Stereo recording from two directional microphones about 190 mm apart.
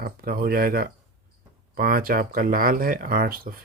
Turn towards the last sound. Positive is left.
turn(degrees=-50)  # may be behind; listen again after turning